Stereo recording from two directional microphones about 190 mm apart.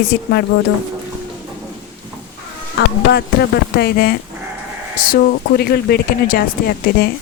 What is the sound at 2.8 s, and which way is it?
Speech, 60° left (ahead or behind).